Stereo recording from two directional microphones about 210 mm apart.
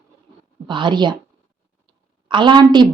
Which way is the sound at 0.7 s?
20° right (ahead or behind).